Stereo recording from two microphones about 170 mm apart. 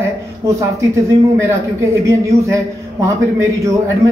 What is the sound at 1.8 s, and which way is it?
A man's voice, 15° right (ahead or behind).